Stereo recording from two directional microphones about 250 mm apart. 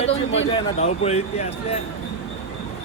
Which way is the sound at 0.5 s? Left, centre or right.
Left.